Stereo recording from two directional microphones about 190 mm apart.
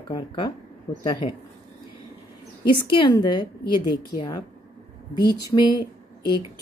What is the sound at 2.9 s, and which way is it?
A woman's voice, 25° left (ahead or behind).